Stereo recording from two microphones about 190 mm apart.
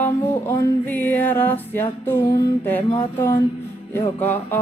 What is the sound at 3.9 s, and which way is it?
Music, 10° left (ahead or behind).